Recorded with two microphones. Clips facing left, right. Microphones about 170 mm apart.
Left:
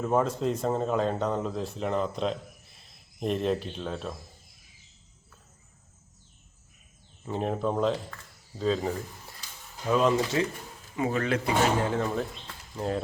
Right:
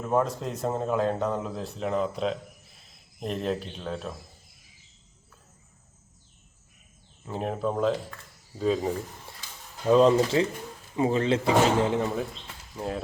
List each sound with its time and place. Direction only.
0.0 s speech: centre (ahead or behind)
7.3 s speech: 5° right (ahead or behind)
9.9 s speech: 30° right (ahead or behind)
12.7 s speech: 5° right (ahead or behind)